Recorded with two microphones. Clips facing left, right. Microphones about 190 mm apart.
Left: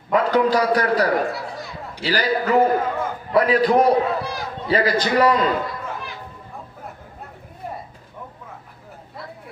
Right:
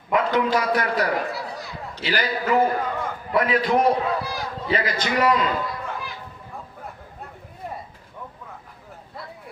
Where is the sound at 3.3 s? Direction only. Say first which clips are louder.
Left 4 dB; 35° left (ahead or behind).